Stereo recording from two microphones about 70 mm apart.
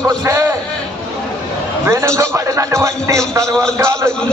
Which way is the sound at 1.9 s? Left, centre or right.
Right.